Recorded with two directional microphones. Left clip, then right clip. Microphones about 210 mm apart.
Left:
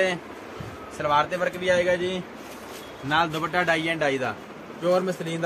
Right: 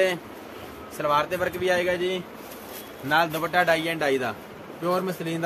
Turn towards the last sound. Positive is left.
turn(degrees=-25)  # may be behind; listen again after turning